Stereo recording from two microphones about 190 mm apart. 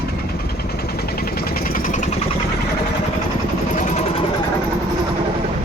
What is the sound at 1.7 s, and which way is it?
Vehicle, 45° left (ahead or behind).